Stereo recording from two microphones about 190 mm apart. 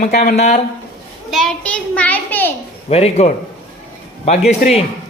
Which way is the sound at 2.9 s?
35° left (ahead or behind).